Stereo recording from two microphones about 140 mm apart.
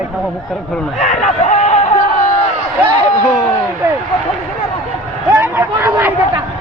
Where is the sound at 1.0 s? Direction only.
65° left (ahead or behind).